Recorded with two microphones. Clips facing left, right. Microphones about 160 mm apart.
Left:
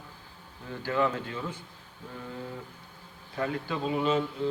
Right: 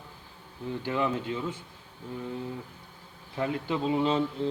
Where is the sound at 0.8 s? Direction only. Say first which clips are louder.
Left 1 dB; 20° right (ahead or behind).